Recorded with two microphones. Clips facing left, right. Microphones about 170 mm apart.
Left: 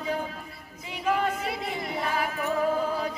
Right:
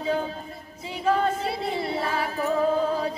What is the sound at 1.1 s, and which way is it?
Singing, 30° right (ahead or behind).